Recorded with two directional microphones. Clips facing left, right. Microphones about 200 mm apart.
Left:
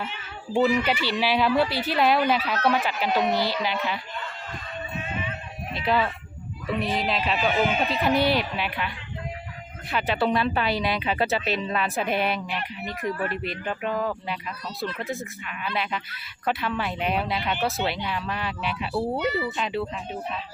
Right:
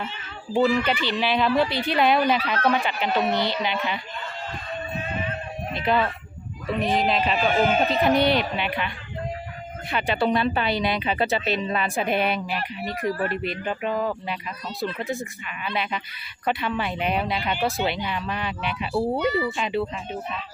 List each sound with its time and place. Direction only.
0.6 s speech: 20° left (ahead or behind); by 4.0 s centre (ahead or behind)
4.9 s a sound: 40° right (ahead or behind)
5.8 s speech: centre (ahead or behind)
6.7 s speech: 45° right (ahead or behind)
8.0 s speech: 5° left (ahead or behind)
9.9 s speech: centre (ahead or behind)
13.1 s speech: 35° right (ahead or behind)
13.3 s speech: centre (ahead or behind)